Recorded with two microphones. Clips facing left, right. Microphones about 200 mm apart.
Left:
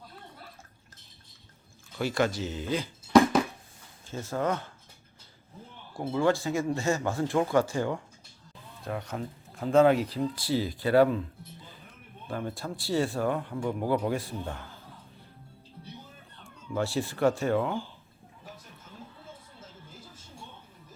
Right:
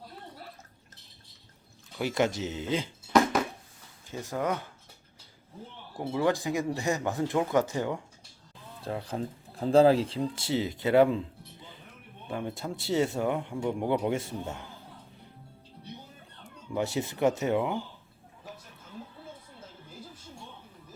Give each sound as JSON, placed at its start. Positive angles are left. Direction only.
{"t": 2.0, "sound": "speech", "side_deg": -20}
{"t": 4.1, "sound": "speech", "side_deg": -15}
{"t": 5.9, "sound": "speech", "side_deg": -15}
{"t": 8.8, "sound": "speech", "side_deg": -30}
{"t": 12.4, "sound": "speech", "side_deg": -20}
{"t": 16.7, "sound": "speech", "side_deg": -20}